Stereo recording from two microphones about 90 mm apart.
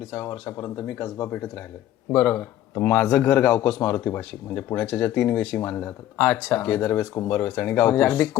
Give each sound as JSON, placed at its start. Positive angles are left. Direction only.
{"t": 0.3, "sound": "a man's voice", "side_deg": 30}